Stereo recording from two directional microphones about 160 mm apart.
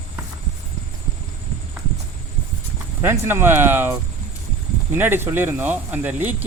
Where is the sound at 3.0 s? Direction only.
15° right (ahead or behind).